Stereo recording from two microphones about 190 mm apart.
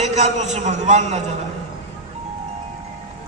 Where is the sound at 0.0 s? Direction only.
35° right (ahead or behind).